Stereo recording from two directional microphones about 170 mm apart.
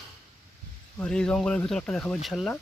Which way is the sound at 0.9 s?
5° left (ahead or behind).